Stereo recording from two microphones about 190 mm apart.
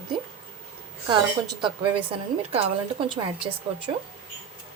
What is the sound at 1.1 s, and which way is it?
A woman's voice, 25° right (ahead or behind).